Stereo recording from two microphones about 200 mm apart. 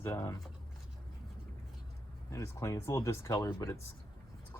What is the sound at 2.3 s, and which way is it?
Speech, 15° left (ahead or behind).